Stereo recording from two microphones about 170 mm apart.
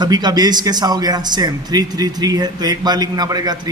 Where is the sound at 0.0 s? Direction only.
25° right (ahead or behind).